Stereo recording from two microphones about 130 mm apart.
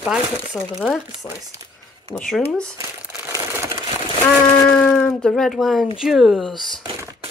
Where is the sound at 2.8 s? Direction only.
25° right (ahead or behind).